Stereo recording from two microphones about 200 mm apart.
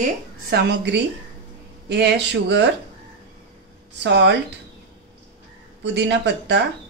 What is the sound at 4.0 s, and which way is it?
Speech, 60° right (ahead or behind).